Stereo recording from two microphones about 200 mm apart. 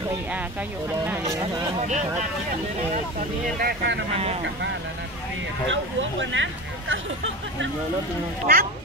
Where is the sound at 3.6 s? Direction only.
55° right (ahead or behind).